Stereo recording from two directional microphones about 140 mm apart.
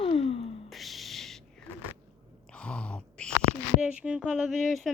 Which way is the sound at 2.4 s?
5° left (ahead or behind).